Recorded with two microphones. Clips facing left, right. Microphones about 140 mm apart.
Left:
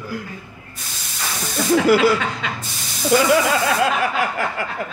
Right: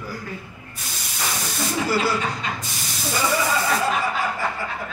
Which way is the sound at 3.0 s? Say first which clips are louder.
Left 7 dB; 80° left.